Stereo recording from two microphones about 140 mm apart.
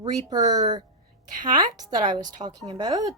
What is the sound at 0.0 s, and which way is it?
A child's voice, 30° right (ahead or behind).